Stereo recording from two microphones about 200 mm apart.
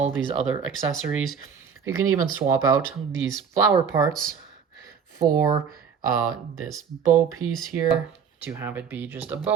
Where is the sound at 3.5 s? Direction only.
15° right (ahead or behind).